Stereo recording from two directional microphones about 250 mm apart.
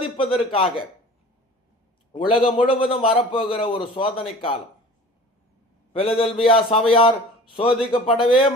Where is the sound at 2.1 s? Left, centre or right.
Left.